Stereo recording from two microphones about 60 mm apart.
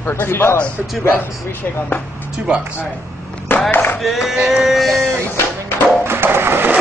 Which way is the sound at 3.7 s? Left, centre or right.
Left.